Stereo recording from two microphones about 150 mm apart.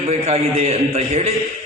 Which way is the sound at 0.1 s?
45° right (ahead or behind).